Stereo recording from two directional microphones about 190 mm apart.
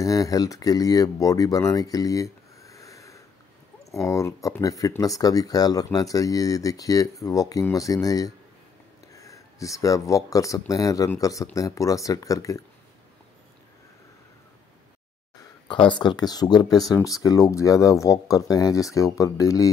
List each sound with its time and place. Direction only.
0.0 s speech: 20° left (ahead or behind)
15.7 s speech: 25° left (ahead or behind)